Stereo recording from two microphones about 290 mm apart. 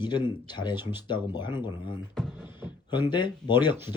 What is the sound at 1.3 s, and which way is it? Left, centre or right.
Speech, centre.